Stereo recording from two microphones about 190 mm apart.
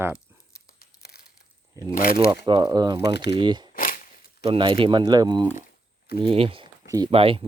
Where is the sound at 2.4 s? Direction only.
25° right (ahead or behind).